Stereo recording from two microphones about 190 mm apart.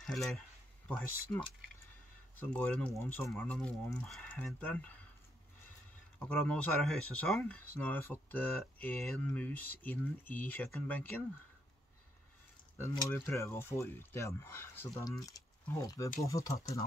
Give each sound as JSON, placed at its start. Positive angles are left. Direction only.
{"t": 0.0, "sound": "speech", "side_deg": 0}
{"t": 2.4, "sound": "speech", "side_deg": 5}
{"t": 6.1, "sound": "speech", "side_deg": 10}
{"t": 12.7, "sound": "speech", "side_deg": 15}